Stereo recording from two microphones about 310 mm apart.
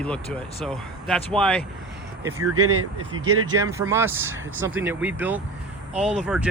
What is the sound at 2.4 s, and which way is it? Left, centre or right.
Speech, right.